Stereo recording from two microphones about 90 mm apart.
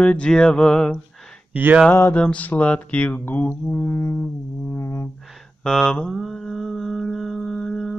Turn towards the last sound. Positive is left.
turn(degrees=5)  # may be behind; listen again after turning